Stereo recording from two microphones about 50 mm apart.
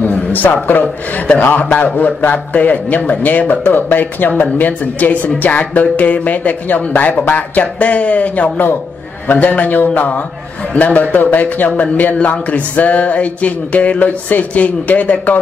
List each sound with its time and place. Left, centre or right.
0.0 s a man's voice: left